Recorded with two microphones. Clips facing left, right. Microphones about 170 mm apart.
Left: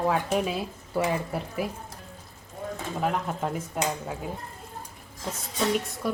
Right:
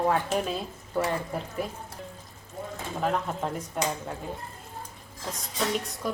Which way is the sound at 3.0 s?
5° left (ahead or behind).